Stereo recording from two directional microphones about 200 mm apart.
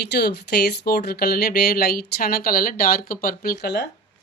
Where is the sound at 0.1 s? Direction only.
55° left (ahead or behind).